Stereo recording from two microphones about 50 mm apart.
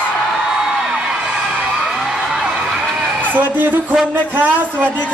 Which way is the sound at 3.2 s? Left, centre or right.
Right.